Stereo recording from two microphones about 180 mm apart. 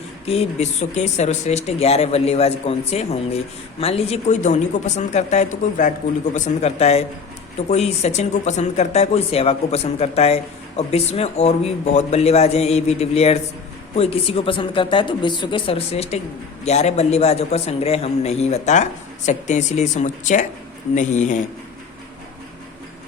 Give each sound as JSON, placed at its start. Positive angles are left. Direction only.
{"t": 0.3, "sound": "speech", "side_deg": 35}